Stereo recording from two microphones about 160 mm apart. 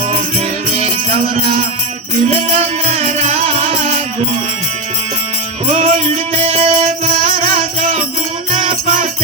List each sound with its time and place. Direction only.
0.8 s music: 40° right (ahead or behind)
5.6 s music: 40° right (ahead or behind)